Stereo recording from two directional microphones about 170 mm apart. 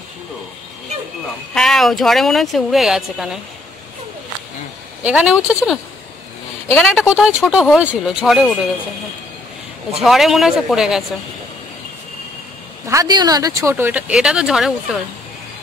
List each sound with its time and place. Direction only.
1.5 s speech: centre (ahead or behind)
5.0 s speech: 5° right (ahead or behind)
6.7 s speech: centre (ahead or behind)
10.0 s speech: centre (ahead or behind)
12.8 s speech: 20° right (ahead or behind); by 14.7 s 5° right (ahead or behind)